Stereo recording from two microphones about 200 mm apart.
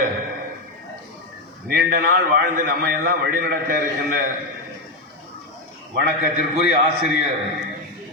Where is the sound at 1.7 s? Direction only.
45° right (ahead or behind).